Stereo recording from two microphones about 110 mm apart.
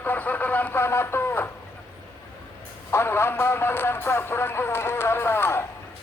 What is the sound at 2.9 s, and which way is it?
Speech, 20° left (ahead or behind).